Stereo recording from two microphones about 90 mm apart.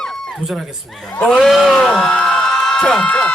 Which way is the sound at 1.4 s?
Centre (ahead or behind).